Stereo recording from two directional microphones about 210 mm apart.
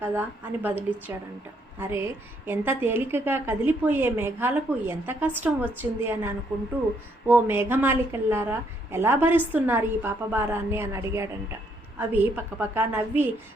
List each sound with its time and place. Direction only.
0.0 s a woman's voice: 10° right (ahead or behind)
2.5 s a woman's voice: 10° right (ahead or behind)